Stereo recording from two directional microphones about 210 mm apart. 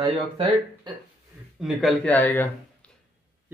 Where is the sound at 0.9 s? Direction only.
20° right (ahead or behind).